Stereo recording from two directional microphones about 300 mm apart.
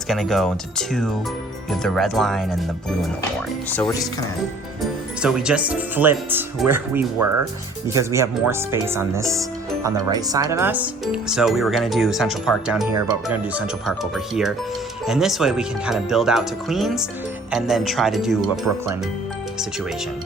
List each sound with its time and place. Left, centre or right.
0.1 s speech: centre
3.7 s speech: centre
12.9 s speech: centre